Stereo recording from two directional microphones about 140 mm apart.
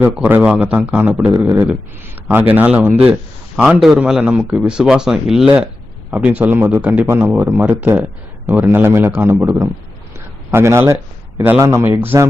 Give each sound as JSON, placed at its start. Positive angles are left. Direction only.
{"t": 0.0, "sound": "a man's voice", "side_deg": -15}